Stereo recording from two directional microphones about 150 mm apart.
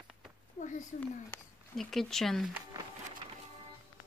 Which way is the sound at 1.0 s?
10° left (ahead or behind).